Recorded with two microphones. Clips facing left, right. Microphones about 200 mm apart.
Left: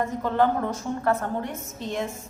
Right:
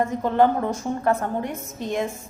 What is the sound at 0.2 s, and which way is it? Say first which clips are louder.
A woman's voice: right 3 dB; 15° right (ahead or behind).